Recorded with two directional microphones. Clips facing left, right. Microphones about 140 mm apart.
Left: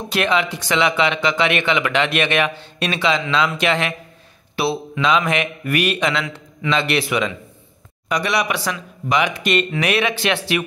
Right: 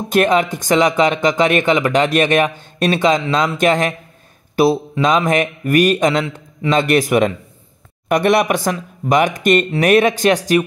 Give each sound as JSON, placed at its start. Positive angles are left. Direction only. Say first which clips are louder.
{"t": 0.1, "sound": "speech", "louder": "right 6 dB", "side_deg": -45}